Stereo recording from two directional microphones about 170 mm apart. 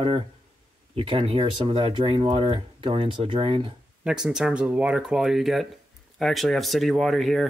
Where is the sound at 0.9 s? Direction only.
30° right (ahead or behind).